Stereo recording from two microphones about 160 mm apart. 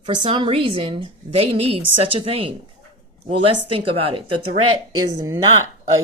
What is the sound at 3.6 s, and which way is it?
Speech, 35° right (ahead or behind).